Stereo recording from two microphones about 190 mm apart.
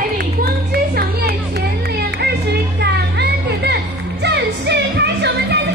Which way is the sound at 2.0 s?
60° right (ahead or behind).